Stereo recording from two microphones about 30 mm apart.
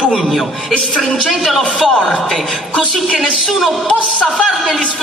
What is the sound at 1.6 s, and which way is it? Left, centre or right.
Speech, left.